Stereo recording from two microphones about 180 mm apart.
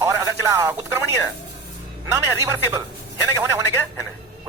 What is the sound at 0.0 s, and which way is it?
Telephone, 15° right (ahead or behind).